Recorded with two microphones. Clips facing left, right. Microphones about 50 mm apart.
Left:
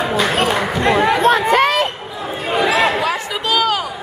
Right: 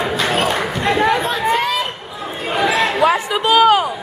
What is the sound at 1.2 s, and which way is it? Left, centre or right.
Chatter, left.